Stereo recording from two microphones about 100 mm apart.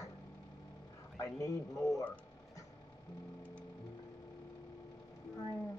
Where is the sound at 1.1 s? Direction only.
30° left (ahead or behind).